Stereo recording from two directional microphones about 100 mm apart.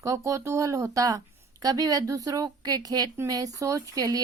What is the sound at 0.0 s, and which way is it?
A woman's voice, 35° right (ahead or behind).